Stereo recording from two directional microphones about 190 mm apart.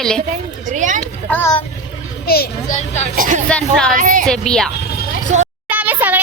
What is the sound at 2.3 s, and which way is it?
Speech, 55° left (ahead or behind).